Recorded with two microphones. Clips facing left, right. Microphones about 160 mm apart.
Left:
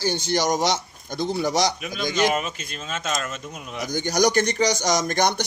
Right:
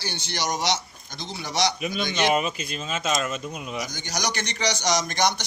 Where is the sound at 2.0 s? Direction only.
40° left (ahead or behind).